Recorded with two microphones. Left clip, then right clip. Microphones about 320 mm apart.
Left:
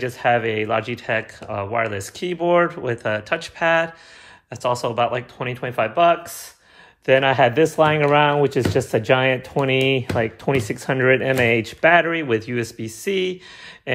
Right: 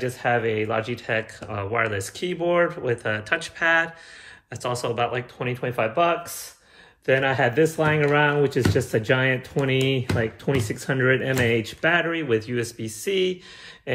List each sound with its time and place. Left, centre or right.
0.0 s speech: left